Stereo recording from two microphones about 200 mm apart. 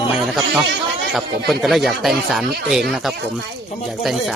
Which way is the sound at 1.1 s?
Centre (ahead or behind).